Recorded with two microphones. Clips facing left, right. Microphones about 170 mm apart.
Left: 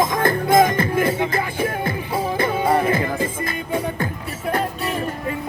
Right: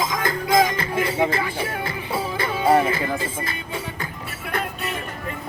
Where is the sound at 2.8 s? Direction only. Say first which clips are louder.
Left 4 dB; 50° left (ahead or behind).